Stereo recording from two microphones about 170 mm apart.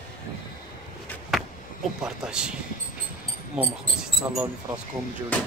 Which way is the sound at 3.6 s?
5° right (ahead or behind).